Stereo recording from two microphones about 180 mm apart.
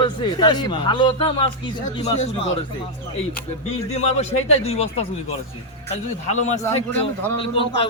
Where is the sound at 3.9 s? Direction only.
35° left (ahead or behind).